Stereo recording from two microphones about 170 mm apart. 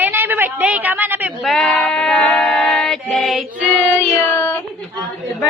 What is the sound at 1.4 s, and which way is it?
A woman's voice, centre (ahead or behind).